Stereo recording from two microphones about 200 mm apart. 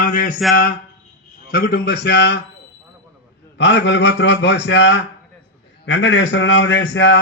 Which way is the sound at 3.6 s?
60° left (ahead or behind).